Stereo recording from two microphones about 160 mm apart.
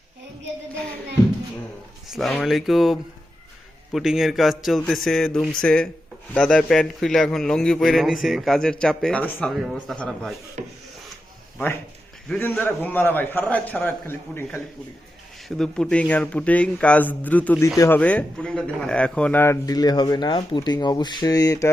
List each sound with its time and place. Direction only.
2.0 s a man's voice: centre (ahead or behind)
10.6 s wood: 50° right (ahead or behind)
12.3 s a man's voice: 10° left (ahead or behind)
15.4 s a man's voice: 5° left (ahead or behind); by 21.7 s 20° left (ahead or behind)